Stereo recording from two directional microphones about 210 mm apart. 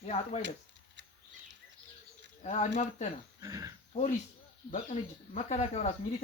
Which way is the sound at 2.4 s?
35° left (ahead or behind).